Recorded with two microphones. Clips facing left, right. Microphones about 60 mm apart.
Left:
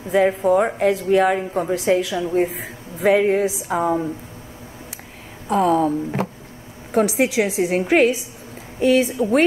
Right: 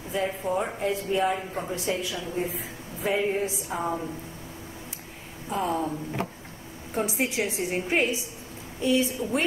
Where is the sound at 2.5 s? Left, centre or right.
Left.